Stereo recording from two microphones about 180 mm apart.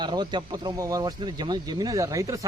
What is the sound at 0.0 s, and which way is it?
Speech, 25° right (ahead or behind).